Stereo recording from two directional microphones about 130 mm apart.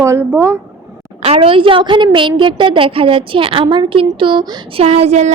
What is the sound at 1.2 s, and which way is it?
A woman's voice, 45° right (ahead or behind).